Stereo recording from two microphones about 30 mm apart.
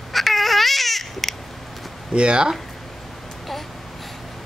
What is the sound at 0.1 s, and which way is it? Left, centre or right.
Baby cry, centre.